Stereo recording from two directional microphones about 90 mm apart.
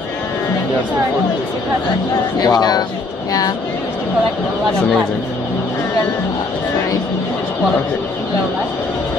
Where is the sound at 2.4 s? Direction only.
50° left (ahead or behind).